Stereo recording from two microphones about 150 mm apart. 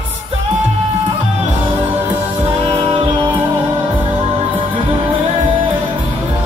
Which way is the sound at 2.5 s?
35° right (ahead or behind).